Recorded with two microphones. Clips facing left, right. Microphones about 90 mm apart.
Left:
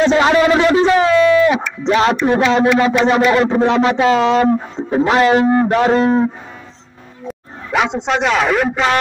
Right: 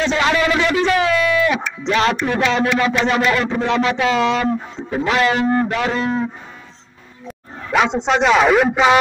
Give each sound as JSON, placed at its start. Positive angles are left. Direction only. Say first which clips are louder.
{"t": 0.1, "sound": "a man's voice", "louder": "left 5 dB", "side_deg": 30}
{"t": 7.2, "sound": "bow-wow", "louder": "left 2 dB", "side_deg": 0}
{"t": 8.1, "sound": "a man's voice", "louder": "right 3 dB", "side_deg": -5}